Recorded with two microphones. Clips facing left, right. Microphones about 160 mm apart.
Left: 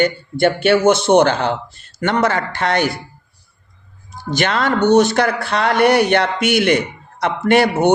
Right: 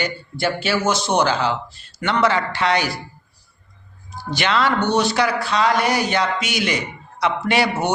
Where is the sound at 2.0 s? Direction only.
45° left (ahead or behind).